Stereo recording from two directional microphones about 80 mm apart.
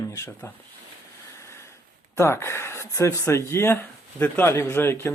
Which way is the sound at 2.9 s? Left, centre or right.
Left.